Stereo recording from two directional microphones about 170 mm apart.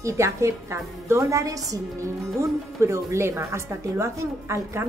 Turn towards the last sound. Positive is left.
turn(degrees=-15)  # may be behind; listen again after turning